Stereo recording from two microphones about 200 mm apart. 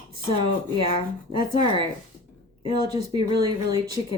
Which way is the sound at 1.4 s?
25° right (ahead or behind).